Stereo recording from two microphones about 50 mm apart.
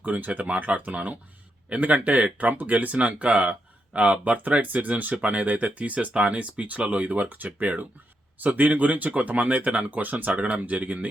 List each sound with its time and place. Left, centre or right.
0.0 s speech: right